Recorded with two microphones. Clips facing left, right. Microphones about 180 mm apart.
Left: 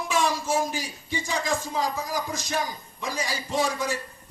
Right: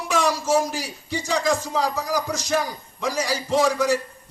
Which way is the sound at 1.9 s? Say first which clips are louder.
Right 5 dB; 85° right.